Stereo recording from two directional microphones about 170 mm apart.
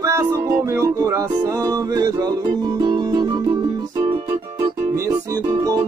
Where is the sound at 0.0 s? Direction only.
15° right (ahead or behind).